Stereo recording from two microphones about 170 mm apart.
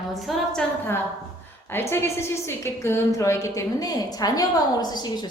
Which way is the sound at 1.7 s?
15° left (ahead or behind).